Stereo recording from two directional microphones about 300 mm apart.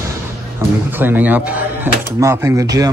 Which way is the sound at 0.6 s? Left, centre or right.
Centre.